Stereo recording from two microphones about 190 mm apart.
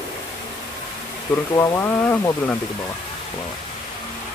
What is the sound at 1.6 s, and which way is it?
Speech, 15° left (ahead or behind).